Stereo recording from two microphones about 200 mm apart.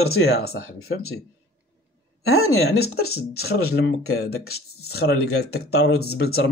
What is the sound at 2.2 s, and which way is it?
Speech, 90° left.